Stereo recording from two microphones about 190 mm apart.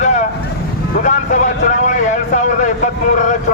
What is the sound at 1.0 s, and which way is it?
A man's voice, 40° left (ahead or behind).